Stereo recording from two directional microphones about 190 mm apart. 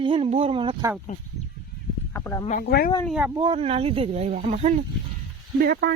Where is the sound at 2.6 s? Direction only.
60° left (ahead or behind).